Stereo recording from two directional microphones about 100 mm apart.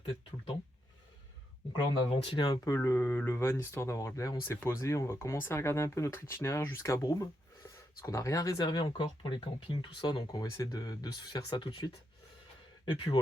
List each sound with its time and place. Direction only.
1.7 s speech: 50° left (ahead or behind)
2.7 s speech: 25° left (ahead or behind)
8.6 s speech: 55° left (ahead or behind)
10.6 s speech: 40° left (ahead or behind)